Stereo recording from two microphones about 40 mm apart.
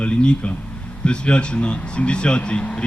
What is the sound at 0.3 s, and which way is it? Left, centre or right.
Speech, left.